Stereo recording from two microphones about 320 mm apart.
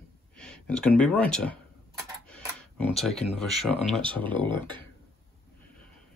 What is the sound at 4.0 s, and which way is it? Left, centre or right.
Speech, centre.